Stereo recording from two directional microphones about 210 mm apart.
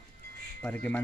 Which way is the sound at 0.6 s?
5° left (ahead or behind).